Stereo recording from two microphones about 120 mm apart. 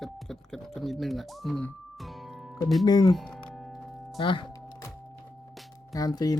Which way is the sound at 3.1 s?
5° left (ahead or behind).